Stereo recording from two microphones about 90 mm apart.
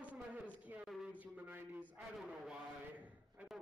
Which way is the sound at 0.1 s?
15° right (ahead or behind).